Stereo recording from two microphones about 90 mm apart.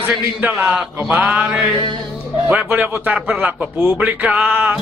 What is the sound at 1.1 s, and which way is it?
Music, 15° right (ahead or behind).